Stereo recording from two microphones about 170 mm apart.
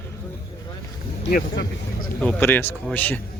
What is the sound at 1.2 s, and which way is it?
Speech, 85° left.